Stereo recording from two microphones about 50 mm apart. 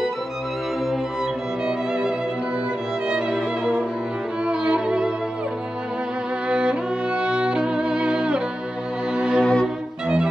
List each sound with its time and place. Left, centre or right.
4.5 s violin: centre
6.5 s music: centre
9.4 s music: centre